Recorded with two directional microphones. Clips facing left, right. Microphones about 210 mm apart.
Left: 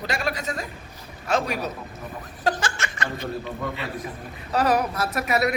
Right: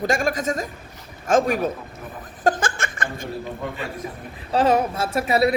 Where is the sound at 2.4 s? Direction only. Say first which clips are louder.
Right 4 dB; 50° right (ahead or behind).